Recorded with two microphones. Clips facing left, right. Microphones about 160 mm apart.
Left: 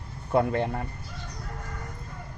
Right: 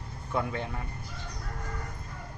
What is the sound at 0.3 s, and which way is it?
Speech, 55° left (ahead or behind).